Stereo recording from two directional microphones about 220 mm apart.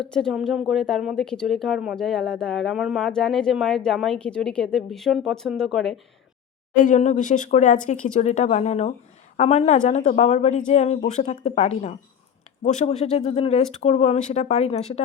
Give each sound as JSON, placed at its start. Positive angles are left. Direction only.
{"t": 0.1, "sound": "a woman's voice", "side_deg": 0}
{"t": 6.7, "sound": "speech", "side_deg": 35}